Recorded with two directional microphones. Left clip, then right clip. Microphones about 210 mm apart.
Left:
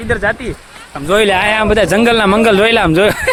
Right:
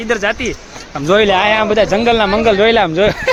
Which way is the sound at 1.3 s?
20° left (ahead or behind).